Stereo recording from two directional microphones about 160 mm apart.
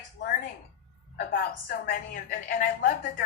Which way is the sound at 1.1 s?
65° left (ahead or behind).